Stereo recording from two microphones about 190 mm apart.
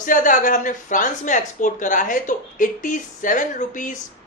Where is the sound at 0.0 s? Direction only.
45° left (ahead or behind).